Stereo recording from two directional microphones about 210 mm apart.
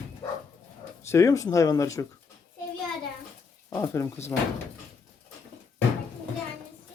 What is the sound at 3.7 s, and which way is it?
Speech, 10° left (ahead or behind).